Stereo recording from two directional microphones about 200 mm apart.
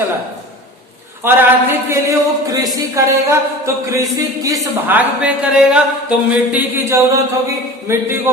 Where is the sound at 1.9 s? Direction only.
15° right (ahead or behind).